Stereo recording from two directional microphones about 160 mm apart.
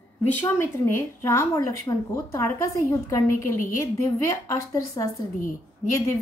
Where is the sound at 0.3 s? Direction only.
15° left (ahead or behind).